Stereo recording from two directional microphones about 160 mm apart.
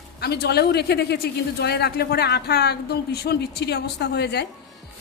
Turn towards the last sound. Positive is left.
turn(degrees=90)